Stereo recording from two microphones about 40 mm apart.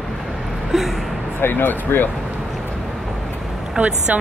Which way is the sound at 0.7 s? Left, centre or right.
Centre.